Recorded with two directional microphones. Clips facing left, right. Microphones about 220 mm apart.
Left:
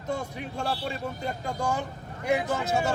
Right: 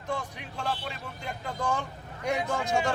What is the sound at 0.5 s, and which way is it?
Speech, 40° left (ahead or behind).